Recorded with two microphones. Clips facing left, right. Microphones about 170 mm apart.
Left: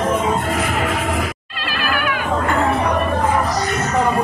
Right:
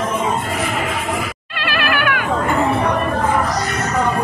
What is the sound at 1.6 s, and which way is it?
Music, 70° right (ahead or behind).